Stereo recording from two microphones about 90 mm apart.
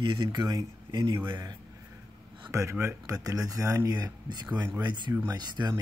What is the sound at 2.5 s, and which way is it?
Speech, 35° right (ahead or behind).